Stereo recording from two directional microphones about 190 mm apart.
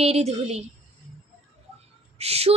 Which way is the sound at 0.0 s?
35° right (ahead or behind).